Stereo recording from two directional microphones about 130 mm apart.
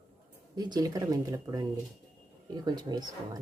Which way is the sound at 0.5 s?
30° right (ahead or behind).